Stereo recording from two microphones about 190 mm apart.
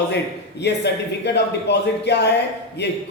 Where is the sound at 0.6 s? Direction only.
60° left (ahead or behind).